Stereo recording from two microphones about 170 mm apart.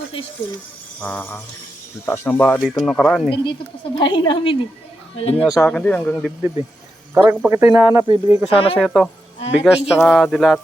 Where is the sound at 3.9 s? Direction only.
25° left (ahead or behind).